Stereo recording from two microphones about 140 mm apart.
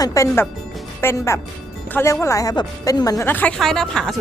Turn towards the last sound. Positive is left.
turn(degrees=5)  # may be behind; listen again after turning